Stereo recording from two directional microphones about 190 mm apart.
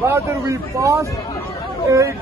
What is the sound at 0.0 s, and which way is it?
Speech, 15° right (ahead or behind).